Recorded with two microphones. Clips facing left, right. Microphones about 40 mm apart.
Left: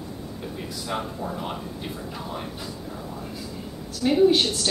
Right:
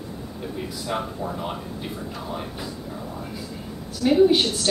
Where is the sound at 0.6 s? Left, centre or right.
Centre.